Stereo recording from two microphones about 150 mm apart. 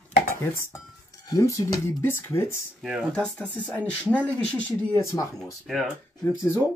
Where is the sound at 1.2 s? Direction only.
20° left (ahead or behind).